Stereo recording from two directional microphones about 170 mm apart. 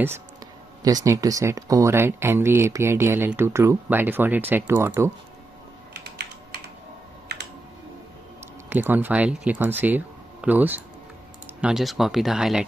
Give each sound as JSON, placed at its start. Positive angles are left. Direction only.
{"t": 0.8, "sound": "speech", "side_deg": -20}
{"t": 6.0, "sound": "typing", "side_deg": -75}
{"t": 7.3, "sound": "computer keyboard", "side_deg": -75}
{"t": 8.6, "sound": "speech", "side_deg": -10}